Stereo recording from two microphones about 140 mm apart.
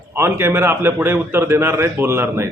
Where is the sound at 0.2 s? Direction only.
15° right (ahead or behind).